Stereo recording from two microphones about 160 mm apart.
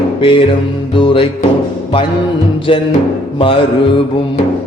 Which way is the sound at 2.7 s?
35° left (ahead or behind).